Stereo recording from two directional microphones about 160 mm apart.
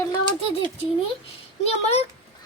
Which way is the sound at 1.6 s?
40° left (ahead or behind).